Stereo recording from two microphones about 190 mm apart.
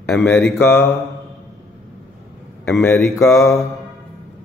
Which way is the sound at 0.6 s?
10° left (ahead or behind).